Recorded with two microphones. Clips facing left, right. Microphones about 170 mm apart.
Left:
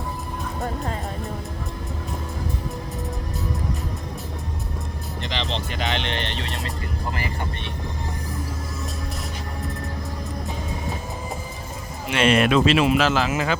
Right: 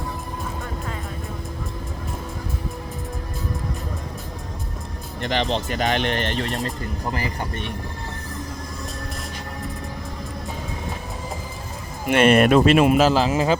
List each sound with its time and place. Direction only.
5.2 s speech: 50° right (ahead or behind)
12.0 s speech: 55° right (ahead or behind); by 13.6 s 35° right (ahead or behind)